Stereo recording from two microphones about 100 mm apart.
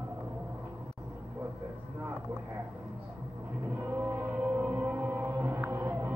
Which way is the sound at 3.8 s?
20° right (ahead or behind).